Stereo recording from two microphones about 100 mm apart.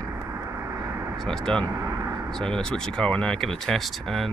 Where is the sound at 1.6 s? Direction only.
30° right (ahead or behind).